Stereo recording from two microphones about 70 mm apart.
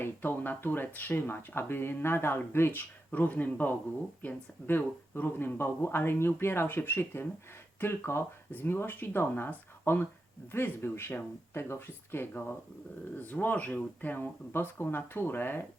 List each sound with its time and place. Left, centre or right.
0.0 s speech: left
3.1 s speech: left